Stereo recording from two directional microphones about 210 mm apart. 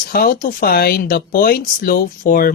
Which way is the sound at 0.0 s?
45° left (ahead or behind).